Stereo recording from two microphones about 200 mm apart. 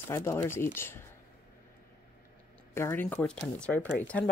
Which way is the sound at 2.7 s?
10° left (ahead or behind).